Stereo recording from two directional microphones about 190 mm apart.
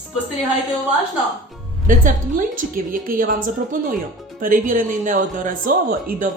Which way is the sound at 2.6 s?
45° right (ahead or behind).